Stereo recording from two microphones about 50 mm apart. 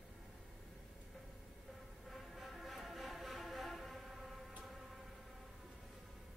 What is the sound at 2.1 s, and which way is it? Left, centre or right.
Music, centre.